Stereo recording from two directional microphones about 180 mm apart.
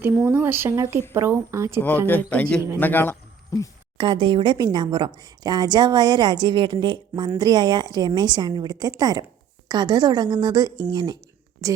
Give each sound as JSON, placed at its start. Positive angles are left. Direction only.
{"t": 0.0, "sound": "speech", "side_deg": -10}
{"t": 2.0, "sound": "a man's voice", "side_deg": 10}
{"t": 3.9, "sound": "a woman's voice", "side_deg": -25}